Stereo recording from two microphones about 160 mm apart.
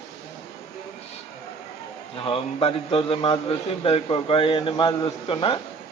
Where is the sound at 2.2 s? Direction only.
35° left (ahead or behind).